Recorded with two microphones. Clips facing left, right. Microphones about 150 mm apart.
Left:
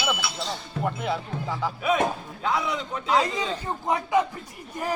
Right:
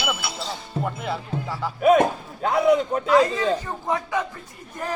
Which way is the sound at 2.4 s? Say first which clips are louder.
Right 9 dB; 50° right (ahead or behind).